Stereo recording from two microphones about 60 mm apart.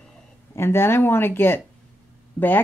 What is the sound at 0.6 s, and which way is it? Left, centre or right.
A woman's voice, left.